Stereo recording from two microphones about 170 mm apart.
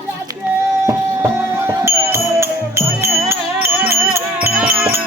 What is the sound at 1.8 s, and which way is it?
Music, 15° right (ahead or behind).